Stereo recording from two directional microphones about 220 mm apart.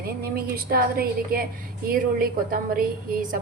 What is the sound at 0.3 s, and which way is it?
A woman's voice, 45° right (ahead or behind).